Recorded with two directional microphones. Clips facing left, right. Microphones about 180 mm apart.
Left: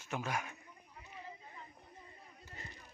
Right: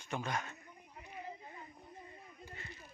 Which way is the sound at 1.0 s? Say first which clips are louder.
Right 4 dB; 25° right (ahead or behind).